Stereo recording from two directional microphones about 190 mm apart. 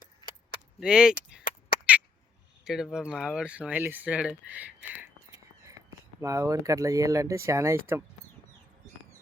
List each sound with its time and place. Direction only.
0.8 s speech: 5° right (ahead or behind)
2.6 s speech: centre (ahead or behind)
6.1 s speech: 15° right (ahead or behind)